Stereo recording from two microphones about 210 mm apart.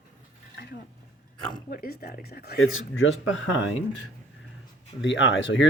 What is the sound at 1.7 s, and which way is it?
Speech, 45° left (ahead or behind).